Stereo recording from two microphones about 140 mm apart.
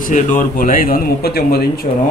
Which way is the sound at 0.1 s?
75° left (ahead or behind).